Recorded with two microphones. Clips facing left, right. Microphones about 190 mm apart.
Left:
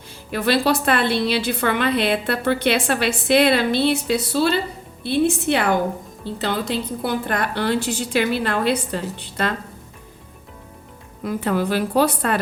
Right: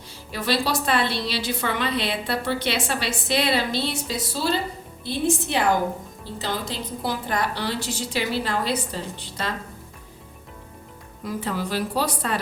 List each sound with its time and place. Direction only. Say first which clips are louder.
0.3 s a woman's voice: left 6 dB; 60° left (ahead or behind)
11.2 s a woman's voice: left 6 dB; 60° left (ahead or behind)